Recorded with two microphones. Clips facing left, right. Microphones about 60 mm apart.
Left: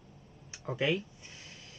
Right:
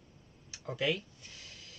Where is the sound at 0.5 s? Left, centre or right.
Left.